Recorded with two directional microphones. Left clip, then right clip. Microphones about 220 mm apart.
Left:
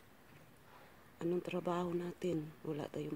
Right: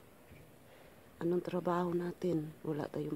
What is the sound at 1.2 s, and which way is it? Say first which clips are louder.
Speech: right 3 dB; 25° right (ahead or behind).